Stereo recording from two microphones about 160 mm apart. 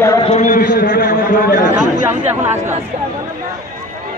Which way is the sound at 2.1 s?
15° right (ahead or behind).